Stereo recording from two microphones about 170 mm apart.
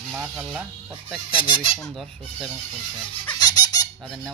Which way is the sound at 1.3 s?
30° left (ahead or behind).